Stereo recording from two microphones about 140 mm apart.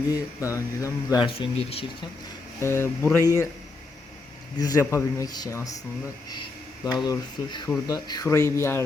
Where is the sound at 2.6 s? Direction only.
20° left (ahead or behind).